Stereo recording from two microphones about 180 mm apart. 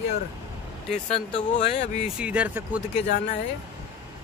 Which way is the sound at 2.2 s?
5° right (ahead or behind).